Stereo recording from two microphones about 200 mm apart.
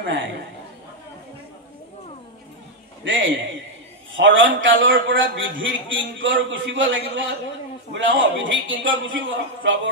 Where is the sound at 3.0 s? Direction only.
70° right (ahead or behind).